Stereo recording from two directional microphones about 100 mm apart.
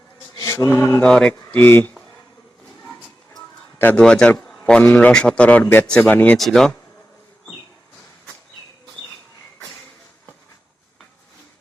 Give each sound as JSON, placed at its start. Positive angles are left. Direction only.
{"t": 0.3, "sound": "mantra", "side_deg": 25}
{"t": 1.0, "sound": "a man's voice", "side_deg": 10}
{"t": 3.8, "sound": "a man's voice", "side_deg": 20}
{"t": 6.3, "sound": "speech", "side_deg": 5}